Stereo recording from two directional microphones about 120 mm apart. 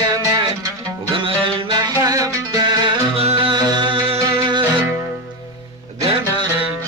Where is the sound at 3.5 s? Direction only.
40° right (ahead or behind).